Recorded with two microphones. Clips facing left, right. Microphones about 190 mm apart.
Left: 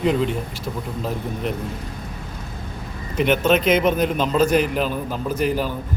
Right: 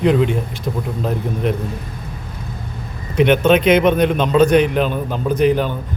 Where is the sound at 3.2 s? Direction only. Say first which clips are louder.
Right 5 dB; 60° right (ahead or behind).